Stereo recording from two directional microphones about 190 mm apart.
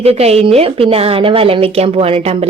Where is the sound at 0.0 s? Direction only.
35° right (ahead or behind).